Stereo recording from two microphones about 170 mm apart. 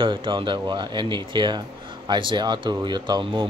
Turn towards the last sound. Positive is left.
turn(degrees=-25)  # may be behind; listen again after turning